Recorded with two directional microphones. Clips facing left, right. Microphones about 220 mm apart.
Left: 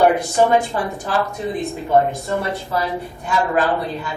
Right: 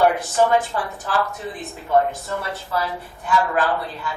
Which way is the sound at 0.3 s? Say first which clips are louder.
Left 2 dB; 15° left (ahead or behind).